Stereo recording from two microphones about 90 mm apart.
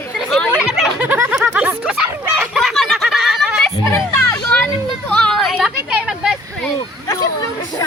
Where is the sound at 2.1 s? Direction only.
25° right (ahead or behind).